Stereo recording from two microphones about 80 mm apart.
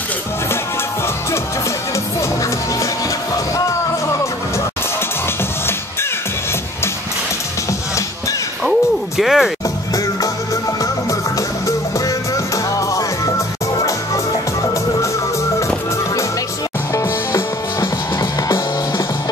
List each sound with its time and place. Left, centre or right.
8.6 s music: centre
10.8 s music: left
12.7 s music: left
16.9 s music: left